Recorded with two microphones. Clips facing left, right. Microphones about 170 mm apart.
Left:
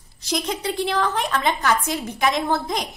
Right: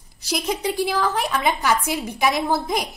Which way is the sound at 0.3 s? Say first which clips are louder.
Right 1 dB; 5° right (ahead or behind).